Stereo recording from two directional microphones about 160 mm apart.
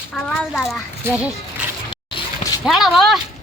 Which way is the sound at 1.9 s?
30° left (ahead or behind).